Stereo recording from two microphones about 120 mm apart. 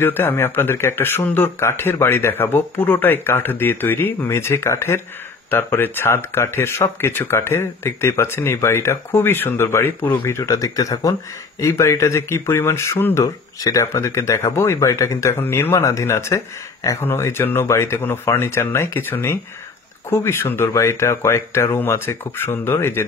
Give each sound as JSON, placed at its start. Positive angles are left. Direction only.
{"t": 0.0, "sound": "speech", "side_deg": 20}